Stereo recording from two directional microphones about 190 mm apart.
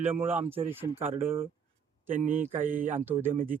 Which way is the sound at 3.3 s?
45° right (ahead or behind).